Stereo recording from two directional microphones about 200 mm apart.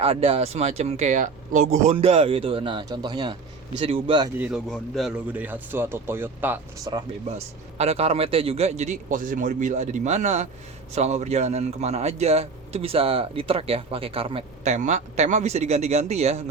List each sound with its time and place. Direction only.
0.0 s speech: 30° right (ahead or behind)
4.4 s speech: 5° right (ahead or behind)
7.8 s speech: 30° right (ahead or behind)